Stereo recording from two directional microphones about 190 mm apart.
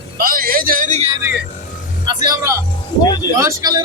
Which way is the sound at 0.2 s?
50° right (ahead or behind).